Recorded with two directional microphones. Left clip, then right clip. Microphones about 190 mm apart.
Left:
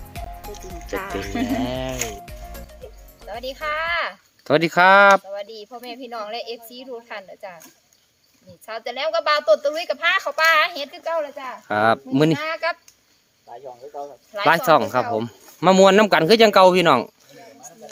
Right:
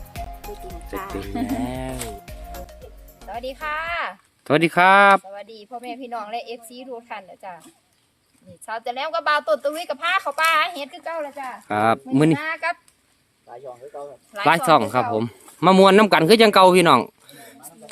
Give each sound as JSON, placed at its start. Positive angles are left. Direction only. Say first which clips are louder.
{"t": 0.1, "sound": "music", "louder": "right 1 dB", "side_deg": 5}
{"t": 0.9, "sound": "music", "louder": "left 3 dB", "side_deg": 30}
{"t": 1.6, "sound": "speech", "louder": "left 3 dB", "side_deg": 5}
{"t": 3.2, "sound": "speech", "louder": "left 1 dB", "side_deg": -15}
{"t": 8.6, "sound": "speech", "louder": "left 1 dB", "side_deg": -15}
{"t": 14.3, "sound": "speech", "louder": "even", "side_deg": -15}